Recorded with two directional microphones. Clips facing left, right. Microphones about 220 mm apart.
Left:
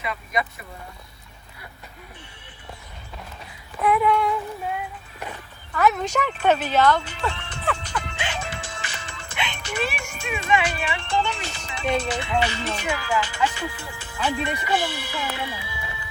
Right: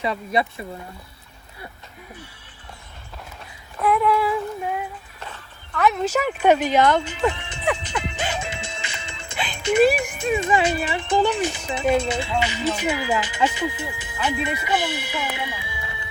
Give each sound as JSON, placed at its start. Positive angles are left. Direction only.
{"t": 0.0, "sound": "speech", "side_deg": -30}
{"t": 3.8, "sound": "a sound", "side_deg": 0}
{"t": 5.2, "sound": "dog", "side_deg": 15}
{"t": 5.8, "sound": "speech", "side_deg": 0}
{"t": 8.4, "sound": "music", "side_deg": -25}
{"t": 10.6, "sound": "speech", "side_deg": -20}
{"t": 14.3, "sound": "speech", "side_deg": -5}
{"t": 14.7, "sound": "speech", "side_deg": -20}